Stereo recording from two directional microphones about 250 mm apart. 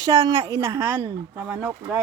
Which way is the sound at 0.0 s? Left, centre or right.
Centre.